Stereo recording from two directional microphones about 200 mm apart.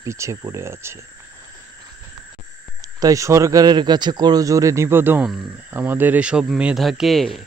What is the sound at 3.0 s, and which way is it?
Speech, 15° right (ahead or behind).